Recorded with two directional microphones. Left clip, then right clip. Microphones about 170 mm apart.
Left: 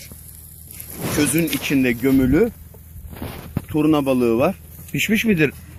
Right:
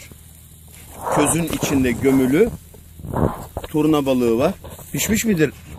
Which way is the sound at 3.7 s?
15° right (ahead or behind).